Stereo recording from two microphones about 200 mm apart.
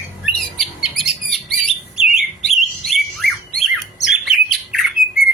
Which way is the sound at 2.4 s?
Centre (ahead or behind).